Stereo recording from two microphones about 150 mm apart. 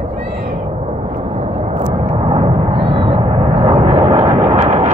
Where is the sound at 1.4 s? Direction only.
45° right (ahead or behind).